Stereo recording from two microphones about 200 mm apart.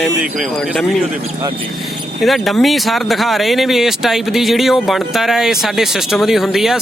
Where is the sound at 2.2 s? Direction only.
Centre (ahead or behind).